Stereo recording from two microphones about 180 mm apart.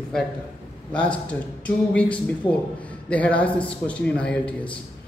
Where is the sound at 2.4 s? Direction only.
30° left (ahead or behind).